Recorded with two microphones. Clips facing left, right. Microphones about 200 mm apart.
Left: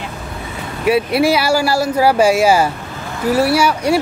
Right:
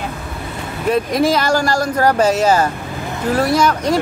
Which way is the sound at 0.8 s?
10° left (ahead or behind).